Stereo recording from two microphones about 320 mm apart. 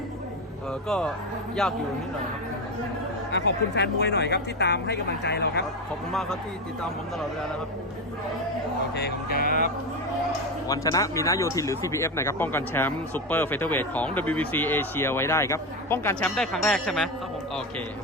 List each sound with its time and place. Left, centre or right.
0.9 s speech: centre
3.3 s speech: left
6.1 s speech: centre
9.0 s speech: left
10.7 s speech: centre